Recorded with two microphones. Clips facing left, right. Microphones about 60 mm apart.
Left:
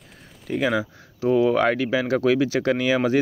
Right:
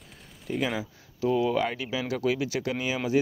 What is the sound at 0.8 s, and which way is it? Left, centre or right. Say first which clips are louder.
Speech: left 4 dB; left.